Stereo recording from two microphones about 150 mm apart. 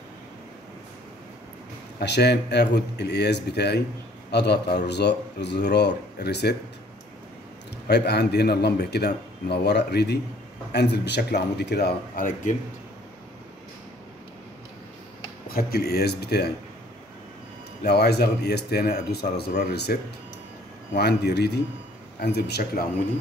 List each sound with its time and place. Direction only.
2.0 s a man's voice: 90° left
7.9 s a man's voice: 90° left; by 12.5 s 65° left (ahead or behind)
15.4 s speech: 90° left
17.8 s a man's voice: 90° left